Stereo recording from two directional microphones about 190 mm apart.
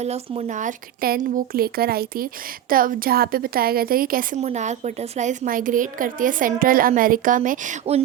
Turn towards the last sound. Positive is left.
turn(degrees=-35)  # may be behind; listen again after turning